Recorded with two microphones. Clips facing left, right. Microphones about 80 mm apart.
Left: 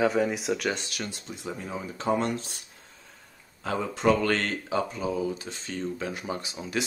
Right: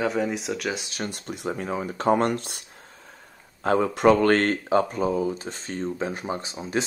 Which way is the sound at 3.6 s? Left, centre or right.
Right.